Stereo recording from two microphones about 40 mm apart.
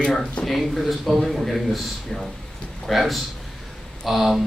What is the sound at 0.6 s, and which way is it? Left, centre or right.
Speech, centre.